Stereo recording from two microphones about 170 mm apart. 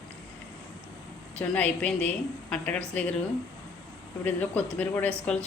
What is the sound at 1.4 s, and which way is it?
A woman's voice, 10° left (ahead or behind).